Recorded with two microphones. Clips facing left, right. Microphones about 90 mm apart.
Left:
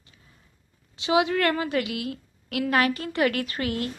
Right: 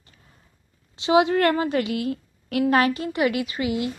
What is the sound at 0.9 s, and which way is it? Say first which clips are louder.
A woman's voice: right 4 dB; 30° right (ahead or behind).